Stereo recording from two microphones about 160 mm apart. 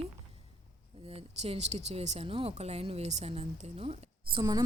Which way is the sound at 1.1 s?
40° right (ahead or behind).